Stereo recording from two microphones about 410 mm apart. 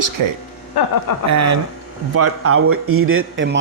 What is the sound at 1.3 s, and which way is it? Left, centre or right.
Speech, right.